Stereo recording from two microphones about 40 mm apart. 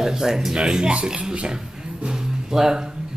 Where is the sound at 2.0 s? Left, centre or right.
Centre.